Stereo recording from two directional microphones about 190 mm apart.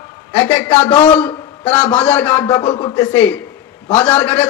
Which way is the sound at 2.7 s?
25° left (ahead or behind).